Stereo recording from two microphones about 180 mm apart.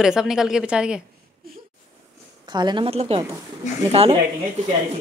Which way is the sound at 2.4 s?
25° right (ahead or behind).